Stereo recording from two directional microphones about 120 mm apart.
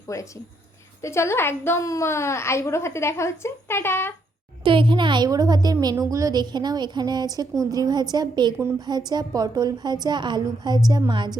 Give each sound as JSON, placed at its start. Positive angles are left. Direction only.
{"t": 0.1, "sound": "a woman's voice", "side_deg": 25}
{"t": 4.6, "sound": "a woman's voice", "side_deg": -45}